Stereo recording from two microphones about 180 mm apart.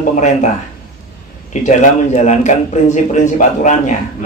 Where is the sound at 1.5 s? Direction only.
40° left (ahead or behind).